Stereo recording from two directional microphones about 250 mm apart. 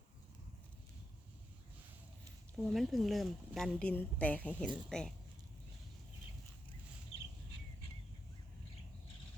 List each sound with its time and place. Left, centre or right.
2.6 s speech: centre